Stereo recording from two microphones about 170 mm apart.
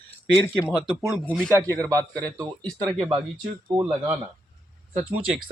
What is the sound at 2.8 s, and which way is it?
Speech, 25° right (ahead or behind).